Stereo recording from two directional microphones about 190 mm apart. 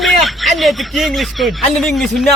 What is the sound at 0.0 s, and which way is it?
Speech, centre (ahead or behind).